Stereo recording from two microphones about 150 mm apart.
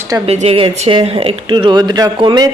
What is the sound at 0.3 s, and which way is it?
Speech, 45° right (ahead or behind).